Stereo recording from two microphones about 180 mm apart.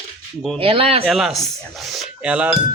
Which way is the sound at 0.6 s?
30° right (ahead or behind).